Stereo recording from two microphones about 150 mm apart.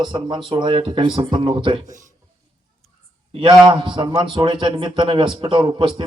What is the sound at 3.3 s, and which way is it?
A man's voice, 35° right (ahead or behind).